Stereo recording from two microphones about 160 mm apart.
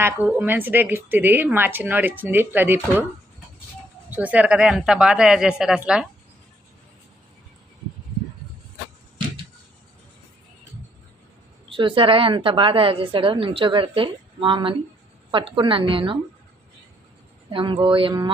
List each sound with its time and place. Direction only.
0.0 s speech: 10° right (ahead or behind)
4.1 s speech: 10° right (ahead or behind)
11.7 s a woman's voice: 30° right (ahead or behind)
17.5 s a woman's voice: 30° right (ahead or behind)